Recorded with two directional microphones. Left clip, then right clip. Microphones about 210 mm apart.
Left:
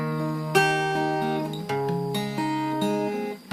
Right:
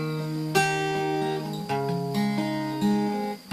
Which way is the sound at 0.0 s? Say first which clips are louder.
Left 2 dB; 25° left (ahead or behind).